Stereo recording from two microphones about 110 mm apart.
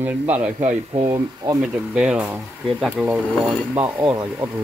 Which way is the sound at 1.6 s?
10° right (ahead or behind).